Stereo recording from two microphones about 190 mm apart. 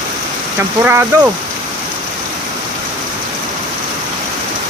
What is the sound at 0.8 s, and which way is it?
Speech, 10° right (ahead or behind).